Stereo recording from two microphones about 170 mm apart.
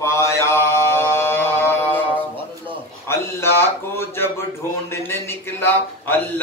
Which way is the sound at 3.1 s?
15° left (ahead or behind).